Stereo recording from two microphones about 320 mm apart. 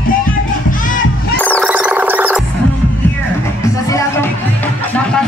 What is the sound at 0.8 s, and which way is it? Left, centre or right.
Music, left.